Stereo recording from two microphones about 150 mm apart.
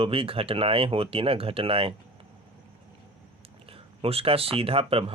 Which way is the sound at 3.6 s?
40° right (ahead or behind).